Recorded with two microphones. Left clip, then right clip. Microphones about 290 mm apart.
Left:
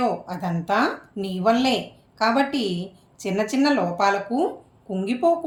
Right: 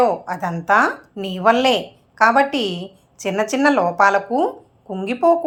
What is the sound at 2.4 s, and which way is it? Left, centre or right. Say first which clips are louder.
Speech: right 5 dB; right.